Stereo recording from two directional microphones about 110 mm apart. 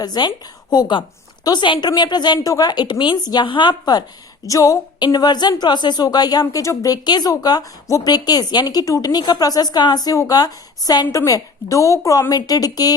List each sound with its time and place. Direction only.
0.0 s a woman's voice: 40° left (ahead or behind)
4.9 s speech: 40° left (ahead or behind)